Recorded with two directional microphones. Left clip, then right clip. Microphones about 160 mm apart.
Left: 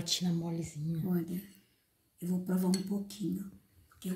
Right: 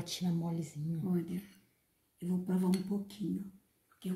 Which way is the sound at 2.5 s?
Centre (ahead or behind).